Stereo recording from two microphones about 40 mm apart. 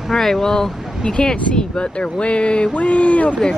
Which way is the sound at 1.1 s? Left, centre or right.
Left.